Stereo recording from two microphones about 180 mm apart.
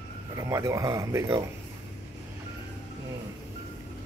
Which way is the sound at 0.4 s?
15° right (ahead or behind).